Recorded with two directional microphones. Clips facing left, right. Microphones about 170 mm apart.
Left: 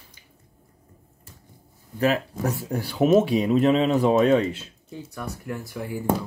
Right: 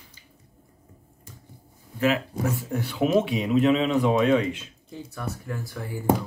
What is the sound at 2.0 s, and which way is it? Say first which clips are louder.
Speech: left 1 dB; 40° left (ahead or behind).